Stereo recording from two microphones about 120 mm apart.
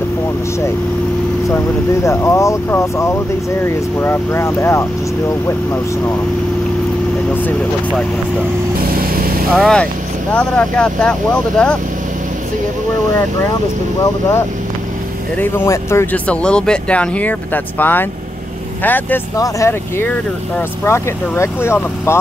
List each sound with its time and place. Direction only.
2.0 s speech: 25° left (ahead or behind)
9.5 s speech: 5° left (ahead or behind)
15.3 s speech: 15° left (ahead or behind)
16.3 s speech: 10° left (ahead or behind)
19.3 s speech: 25° left (ahead or behind)